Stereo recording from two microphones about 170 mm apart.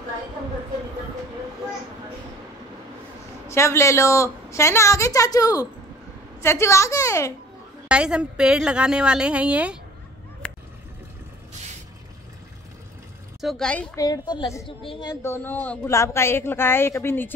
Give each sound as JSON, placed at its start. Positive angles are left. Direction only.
{"t": 3.4, "sound": "a woman's voice", "side_deg": 15}
{"t": 7.9, "sound": "a woman's voice", "side_deg": -5}
{"t": 10.4, "sound": "a sound", "side_deg": 5}
{"t": 13.4, "sound": "a woman's voice", "side_deg": 0}
{"t": 13.9, "sound": "a woman's voice", "side_deg": 20}
{"t": 15.2, "sound": "a woman's voice", "side_deg": 15}